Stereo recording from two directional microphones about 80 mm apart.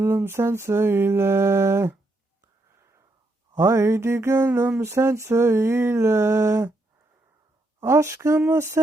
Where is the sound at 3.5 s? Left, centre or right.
Right.